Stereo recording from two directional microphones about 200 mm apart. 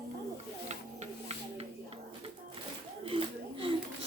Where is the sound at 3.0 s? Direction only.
25° right (ahead or behind).